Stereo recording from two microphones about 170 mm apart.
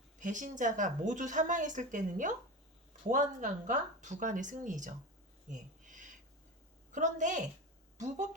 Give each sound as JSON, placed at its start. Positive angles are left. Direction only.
{"t": 0.2, "sound": "speech", "side_deg": -50}
{"t": 5.5, "sound": "a sound", "side_deg": -50}
{"t": 6.9, "sound": "speech", "side_deg": -45}